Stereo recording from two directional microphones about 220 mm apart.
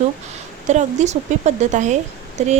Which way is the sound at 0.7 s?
30° right (ahead or behind).